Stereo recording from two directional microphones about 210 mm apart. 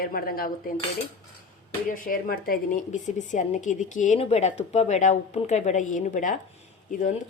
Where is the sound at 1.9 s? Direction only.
45° left (ahead or behind).